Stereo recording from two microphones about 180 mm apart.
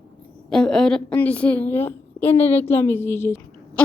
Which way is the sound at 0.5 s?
5° left (ahead or behind).